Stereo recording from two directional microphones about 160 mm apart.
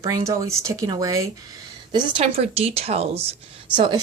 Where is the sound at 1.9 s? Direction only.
35° right (ahead or behind).